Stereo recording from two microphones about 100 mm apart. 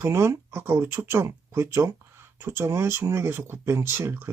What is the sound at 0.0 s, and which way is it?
Speech, 25° right (ahead or behind).